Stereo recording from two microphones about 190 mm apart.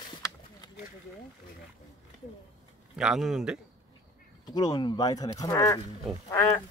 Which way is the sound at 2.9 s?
5° right (ahead or behind).